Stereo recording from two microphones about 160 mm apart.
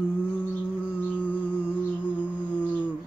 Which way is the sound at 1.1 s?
10° left (ahead or behind).